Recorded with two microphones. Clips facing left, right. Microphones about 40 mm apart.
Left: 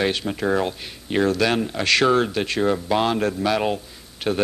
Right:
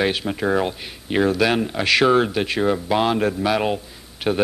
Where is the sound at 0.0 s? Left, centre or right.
Centre.